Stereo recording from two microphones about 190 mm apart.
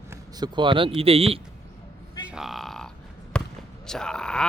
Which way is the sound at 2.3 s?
Centre (ahead or behind).